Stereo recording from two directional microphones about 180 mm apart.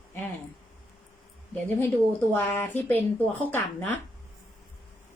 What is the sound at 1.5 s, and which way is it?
Speech, 10° left (ahead or behind).